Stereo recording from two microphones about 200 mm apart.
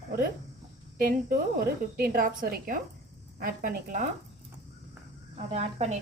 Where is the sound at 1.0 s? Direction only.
45° right (ahead or behind).